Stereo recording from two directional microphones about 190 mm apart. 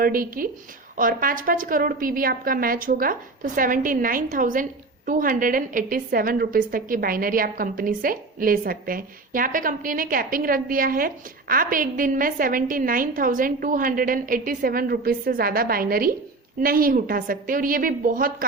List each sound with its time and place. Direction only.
0.0 s a woman's voice: 50° right (ahead or behind)